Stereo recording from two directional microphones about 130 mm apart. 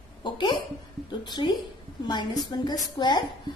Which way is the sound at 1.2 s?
35° left (ahead or behind).